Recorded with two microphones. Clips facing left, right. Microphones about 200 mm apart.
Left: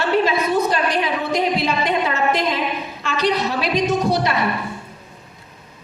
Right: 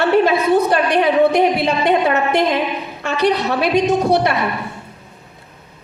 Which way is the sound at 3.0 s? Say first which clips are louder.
Right 5 dB; 65° right (ahead or behind).